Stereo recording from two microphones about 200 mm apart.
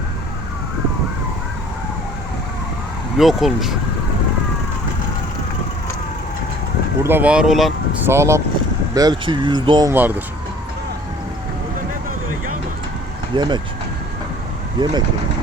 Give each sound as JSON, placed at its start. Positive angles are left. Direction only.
{"t": 3.2, "sound": "speech", "side_deg": 0}
{"t": 7.0, "sound": "speech", "side_deg": -10}
{"t": 8.0, "sound": "speech", "side_deg": -15}
{"t": 9.9, "sound": "speech", "side_deg": -10}
{"t": 13.3, "sound": "speech", "side_deg": -20}
{"t": 14.8, "sound": "speech", "side_deg": -25}